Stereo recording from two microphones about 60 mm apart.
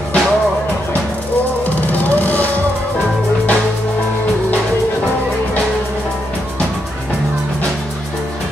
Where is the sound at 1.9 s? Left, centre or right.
Left.